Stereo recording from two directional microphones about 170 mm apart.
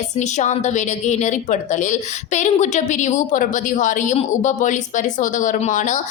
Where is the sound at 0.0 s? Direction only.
45° left (ahead or behind).